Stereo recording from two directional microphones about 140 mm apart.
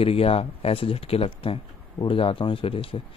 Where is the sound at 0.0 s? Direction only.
45° left (ahead or behind).